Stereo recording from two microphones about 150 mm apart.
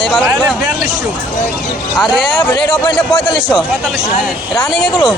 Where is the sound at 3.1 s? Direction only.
35° left (ahead or behind).